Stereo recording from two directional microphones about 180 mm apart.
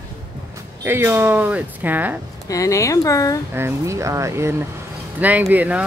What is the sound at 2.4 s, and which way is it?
Speech, 20° left (ahead or behind).